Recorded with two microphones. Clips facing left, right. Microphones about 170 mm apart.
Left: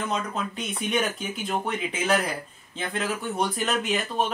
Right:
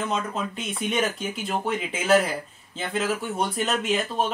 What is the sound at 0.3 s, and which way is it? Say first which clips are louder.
A man's voice: right 1 dB; centre (ahead or behind).